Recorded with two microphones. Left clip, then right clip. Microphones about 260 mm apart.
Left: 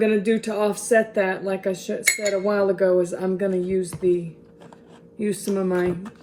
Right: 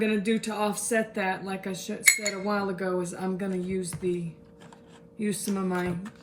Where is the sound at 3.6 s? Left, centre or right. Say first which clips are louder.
Left 9 dB; left.